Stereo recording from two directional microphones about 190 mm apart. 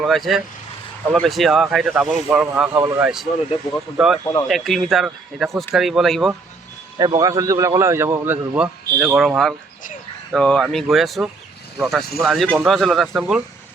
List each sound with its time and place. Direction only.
0.0 s speech: centre (ahead or behind)
2.7 s a man's voice: 20° right (ahead or behind)
3.0 s speech: 5° right (ahead or behind)
7.0 s a man's voice: 20° right (ahead or behind); by 13.4 s centre (ahead or behind)